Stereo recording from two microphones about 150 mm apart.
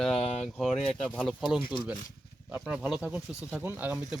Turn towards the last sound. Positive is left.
turn(degrees=-10)  # may be behind; listen again after turning